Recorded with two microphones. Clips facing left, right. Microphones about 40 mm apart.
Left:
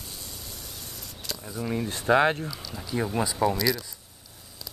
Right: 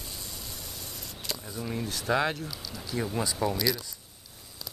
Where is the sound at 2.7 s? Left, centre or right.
Centre.